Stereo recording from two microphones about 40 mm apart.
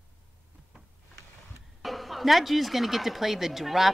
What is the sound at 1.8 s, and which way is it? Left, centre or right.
Speech, centre.